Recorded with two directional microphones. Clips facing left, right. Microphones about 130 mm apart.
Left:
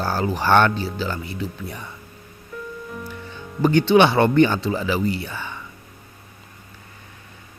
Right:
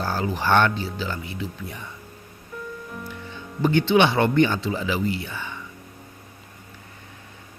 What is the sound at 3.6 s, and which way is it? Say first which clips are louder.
Speech: left 3 dB; 40° left (ahead or behind).